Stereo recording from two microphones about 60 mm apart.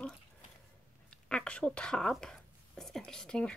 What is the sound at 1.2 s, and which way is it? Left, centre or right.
Speech, centre.